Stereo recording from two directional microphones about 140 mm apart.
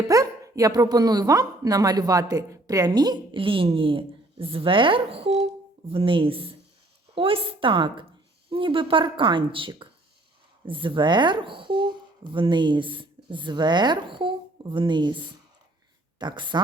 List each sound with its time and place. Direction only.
0.1 s speech: 25° right (ahead or behind)